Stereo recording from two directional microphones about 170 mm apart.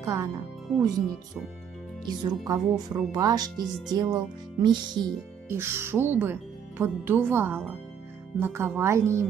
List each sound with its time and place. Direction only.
0.0 s speech: 20° right (ahead or behind)
2.0 s speech: 20° right (ahead or behind)
5.5 s speech: 15° right (ahead or behind)